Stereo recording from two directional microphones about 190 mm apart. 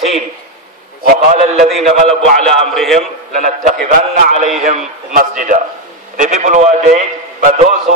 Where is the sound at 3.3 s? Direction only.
45° right (ahead or behind).